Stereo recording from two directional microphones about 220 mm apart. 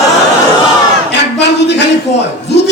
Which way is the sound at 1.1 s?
50° left (ahead or behind).